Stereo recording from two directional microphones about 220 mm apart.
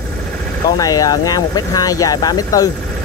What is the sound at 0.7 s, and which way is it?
Speech, 15° left (ahead or behind).